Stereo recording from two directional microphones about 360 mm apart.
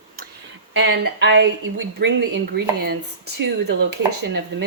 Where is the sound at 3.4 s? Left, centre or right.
Right.